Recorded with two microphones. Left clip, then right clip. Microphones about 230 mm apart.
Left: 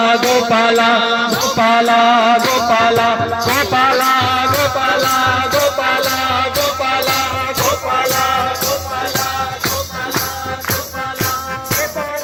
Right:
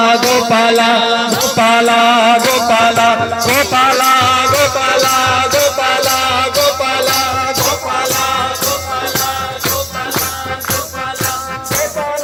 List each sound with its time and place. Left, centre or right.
0.0 s music: right